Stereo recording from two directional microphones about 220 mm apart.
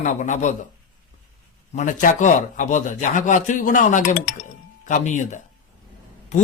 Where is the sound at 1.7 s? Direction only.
35° left (ahead or behind).